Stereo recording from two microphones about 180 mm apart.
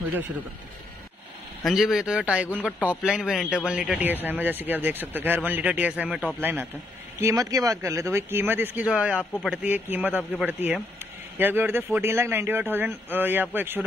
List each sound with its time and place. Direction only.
1.6 s a man's voice: centre (ahead or behind)
11.3 s a man's voice: 10° right (ahead or behind)